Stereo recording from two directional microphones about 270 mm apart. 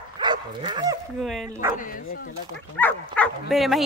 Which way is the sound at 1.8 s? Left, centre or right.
Left.